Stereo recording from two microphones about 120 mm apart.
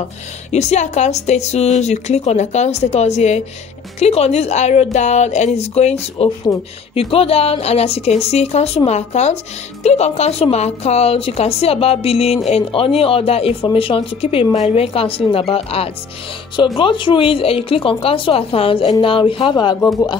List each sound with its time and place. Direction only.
0.5 s a woman's voice: 70° left (ahead or behind)
16.5 s speech: 40° left (ahead or behind)